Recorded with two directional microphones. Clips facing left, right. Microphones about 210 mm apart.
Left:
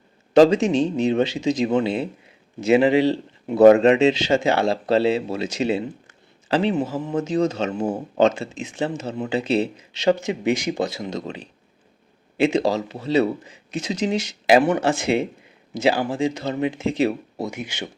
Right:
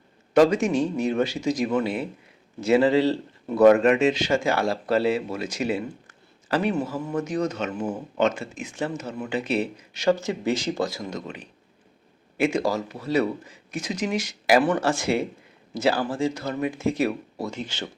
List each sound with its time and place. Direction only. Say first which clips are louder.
0.3 s speech: left 4 dB; 25° left (ahead or behind)
17.5 s speech: left 1 dB; 10° left (ahead or behind)